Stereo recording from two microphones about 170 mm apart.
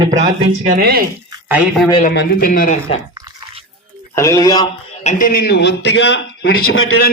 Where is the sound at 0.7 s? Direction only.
60° right (ahead or behind).